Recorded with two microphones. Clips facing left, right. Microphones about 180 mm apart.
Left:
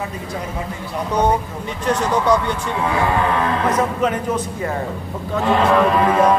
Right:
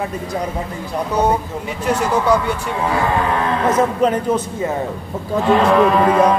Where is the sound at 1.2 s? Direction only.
10° right (ahead or behind).